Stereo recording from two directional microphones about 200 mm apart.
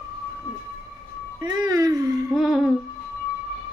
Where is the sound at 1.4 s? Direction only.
20° right (ahead or behind).